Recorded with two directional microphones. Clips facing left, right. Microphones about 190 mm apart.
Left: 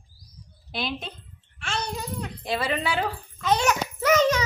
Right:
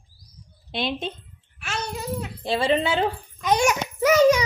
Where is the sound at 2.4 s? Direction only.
30° right (ahead or behind).